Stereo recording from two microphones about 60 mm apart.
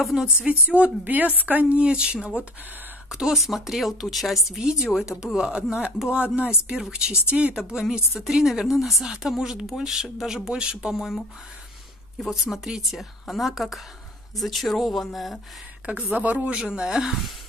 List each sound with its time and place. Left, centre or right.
0.0 s a woman's voice: centre
0.5 s a woman's voice: right
7.5 s a woman's voice: centre
16.1 s a woman's voice: right; by 17.3 s centre